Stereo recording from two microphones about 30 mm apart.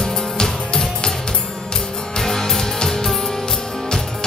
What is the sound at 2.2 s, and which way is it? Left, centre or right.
Music, centre.